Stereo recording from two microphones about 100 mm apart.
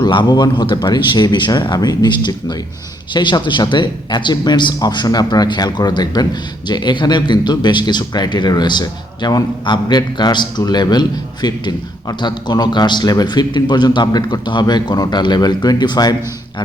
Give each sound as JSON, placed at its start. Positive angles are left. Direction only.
{"t": 0.0, "sound": "a man's voice", "side_deg": 50}